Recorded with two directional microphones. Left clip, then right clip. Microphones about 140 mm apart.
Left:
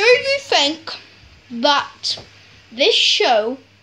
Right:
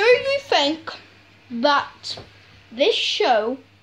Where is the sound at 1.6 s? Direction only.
15° left (ahead or behind).